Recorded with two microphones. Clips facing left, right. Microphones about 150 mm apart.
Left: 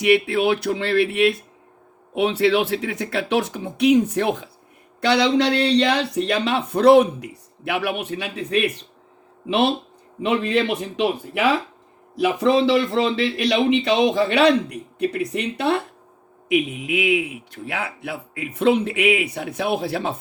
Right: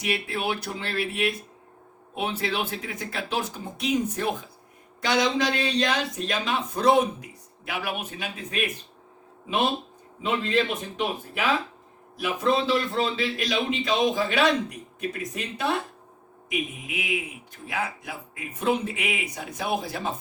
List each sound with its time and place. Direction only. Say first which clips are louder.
0.0 s speech: left 11 dB; 70° left (ahead or behind)